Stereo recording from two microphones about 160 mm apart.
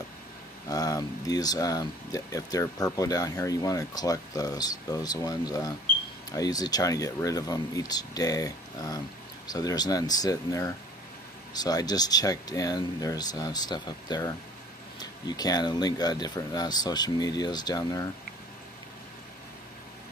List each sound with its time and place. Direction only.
0.7 s speech: 20° left (ahead or behind)